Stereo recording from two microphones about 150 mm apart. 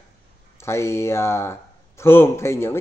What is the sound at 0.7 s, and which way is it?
Speech, 20° left (ahead or behind).